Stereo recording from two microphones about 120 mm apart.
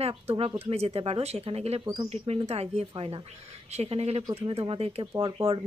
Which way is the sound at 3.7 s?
60° right (ahead or behind).